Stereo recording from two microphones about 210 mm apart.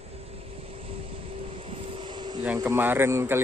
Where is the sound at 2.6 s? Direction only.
10° right (ahead or behind).